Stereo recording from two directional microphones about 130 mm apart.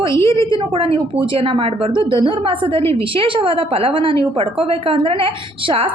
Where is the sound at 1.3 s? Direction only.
45° right (ahead or behind).